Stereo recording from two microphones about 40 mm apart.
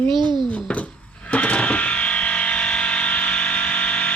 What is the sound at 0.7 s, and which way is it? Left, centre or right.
Music, left.